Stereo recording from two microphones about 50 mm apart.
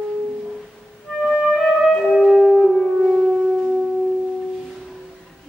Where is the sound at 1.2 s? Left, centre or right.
Centre.